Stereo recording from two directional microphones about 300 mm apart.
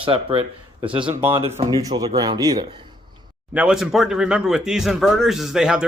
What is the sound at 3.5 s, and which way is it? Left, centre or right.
Speech, centre.